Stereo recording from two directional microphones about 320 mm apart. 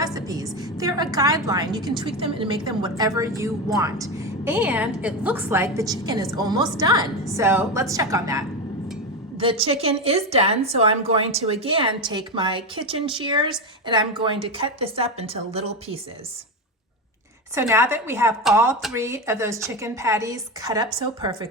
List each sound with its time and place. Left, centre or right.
0.0 s a sound: centre
1.1 s a woman's voice: centre
17.5 s a woman's voice: centre